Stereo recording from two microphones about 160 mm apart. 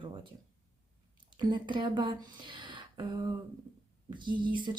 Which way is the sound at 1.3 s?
30° right (ahead or behind).